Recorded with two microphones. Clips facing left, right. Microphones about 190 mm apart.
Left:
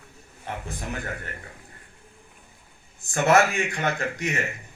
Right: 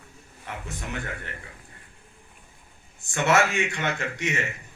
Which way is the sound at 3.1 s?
35° left (ahead or behind).